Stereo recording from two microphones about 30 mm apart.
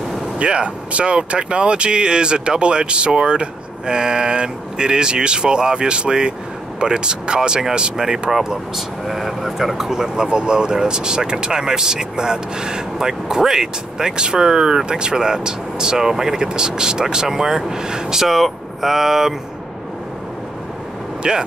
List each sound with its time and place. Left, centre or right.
0.4 s speech: right
8.7 s speech: centre
10.1 s speech: right
21.2 s speech: right